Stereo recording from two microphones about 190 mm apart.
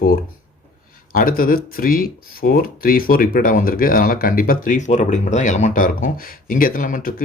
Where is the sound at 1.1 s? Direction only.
50° left (ahead or behind).